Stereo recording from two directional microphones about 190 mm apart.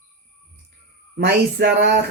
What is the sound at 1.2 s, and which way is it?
Speech, 60° right (ahead or behind).